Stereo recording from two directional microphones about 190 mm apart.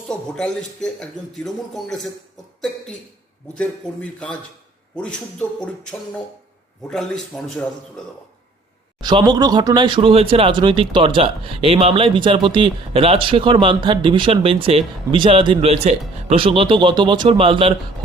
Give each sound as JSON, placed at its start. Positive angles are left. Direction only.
{"t": 0.1, "sound": "a man's voice", "side_deg": 5}
{"t": 3.9, "sound": "a man's voice", "side_deg": 5}
{"t": 6.8, "sound": "a man's voice", "side_deg": 5}
{"t": 9.0, "sound": "speech", "side_deg": -25}